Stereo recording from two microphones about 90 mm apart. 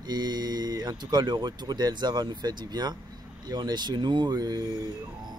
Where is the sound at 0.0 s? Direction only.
50° right (ahead or behind).